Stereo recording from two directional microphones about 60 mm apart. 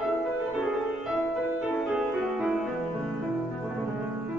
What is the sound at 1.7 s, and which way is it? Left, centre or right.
Music, centre.